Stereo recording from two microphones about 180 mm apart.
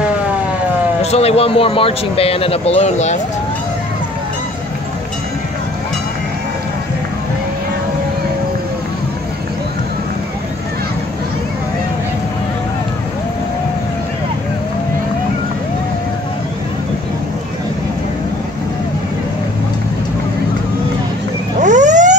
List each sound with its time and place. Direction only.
1.1 s speech: 35° left (ahead or behind)
21.5 s vehicle: 45° right (ahead or behind)